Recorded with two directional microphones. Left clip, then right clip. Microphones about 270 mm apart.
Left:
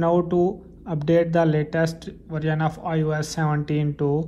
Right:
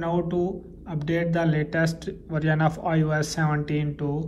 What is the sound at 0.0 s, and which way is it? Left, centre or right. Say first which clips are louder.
A man's voice: left 6 dB; centre.